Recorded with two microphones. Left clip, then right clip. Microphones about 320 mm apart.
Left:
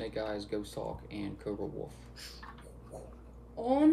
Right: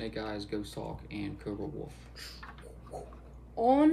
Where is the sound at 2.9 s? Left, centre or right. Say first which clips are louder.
Right 4 dB; centre.